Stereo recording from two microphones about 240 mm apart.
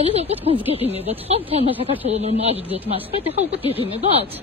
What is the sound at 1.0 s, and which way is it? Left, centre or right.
Speech, right.